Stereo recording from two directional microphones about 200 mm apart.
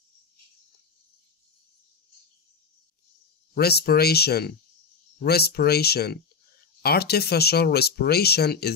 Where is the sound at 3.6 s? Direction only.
50° left (ahead or behind).